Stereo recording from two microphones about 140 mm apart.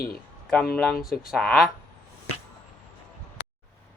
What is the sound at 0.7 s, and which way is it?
Speech, centre (ahead or behind).